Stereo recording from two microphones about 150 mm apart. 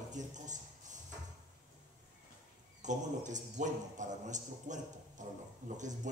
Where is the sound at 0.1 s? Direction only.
55° right (ahead or behind).